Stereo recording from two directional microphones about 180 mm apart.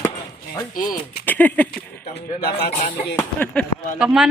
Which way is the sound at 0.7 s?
50° left (ahead or behind).